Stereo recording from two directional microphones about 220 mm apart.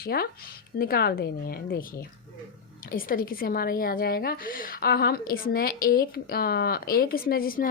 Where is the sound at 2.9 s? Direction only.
40° left (ahead or behind).